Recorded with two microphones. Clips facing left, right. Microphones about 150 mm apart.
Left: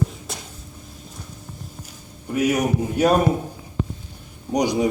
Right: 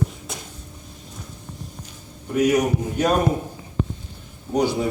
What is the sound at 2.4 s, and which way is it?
Speech, 10° left (ahead or behind).